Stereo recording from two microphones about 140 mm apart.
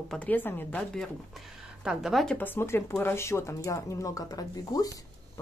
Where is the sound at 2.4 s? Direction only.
15° left (ahead or behind).